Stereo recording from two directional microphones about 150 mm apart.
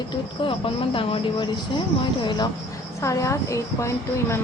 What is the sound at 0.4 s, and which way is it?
Speech, 35° left (ahead or behind).